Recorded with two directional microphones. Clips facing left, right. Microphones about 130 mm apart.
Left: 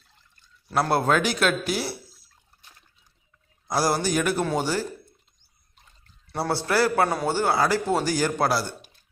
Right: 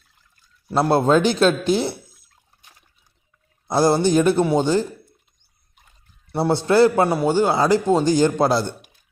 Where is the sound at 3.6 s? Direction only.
25° right (ahead or behind).